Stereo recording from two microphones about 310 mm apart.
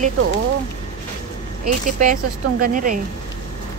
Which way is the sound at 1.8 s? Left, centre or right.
Right.